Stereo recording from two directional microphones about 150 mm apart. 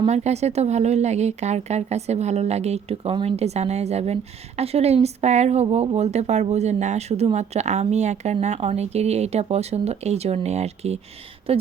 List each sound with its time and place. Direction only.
0.0 s speech: 45° right (ahead or behind)